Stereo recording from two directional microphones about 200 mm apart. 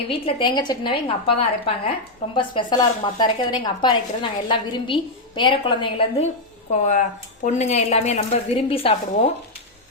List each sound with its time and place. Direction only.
0.1 s speech: 25° left (ahead or behind)
7.4 s a woman's voice: 35° left (ahead or behind)